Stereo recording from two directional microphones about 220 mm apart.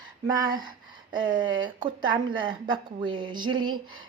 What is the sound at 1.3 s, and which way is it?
A woman's voice, 20° right (ahead or behind).